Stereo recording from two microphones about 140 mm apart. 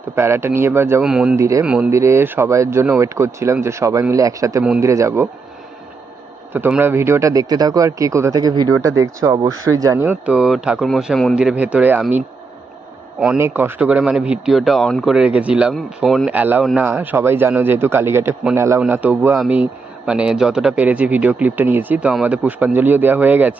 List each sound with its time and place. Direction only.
0.2 s speech: 15° right (ahead or behind)
1.0 s speech: 5° right (ahead or behind)
1.4 s speech: 20° right (ahead or behind)
1.6 s speech: 5° right (ahead or behind)
1.9 s speech: 20° right (ahead or behind)
6.5 s speech: 15° right (ahead or behind); by 11.3 s 5° left (ahead or behind)
11.3 s speech: 10° right (ahead or behind)
13.1 s speech: 5° right (ahead or behind)